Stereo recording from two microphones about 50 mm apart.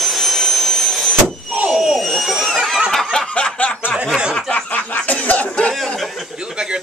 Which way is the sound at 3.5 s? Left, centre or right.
Left.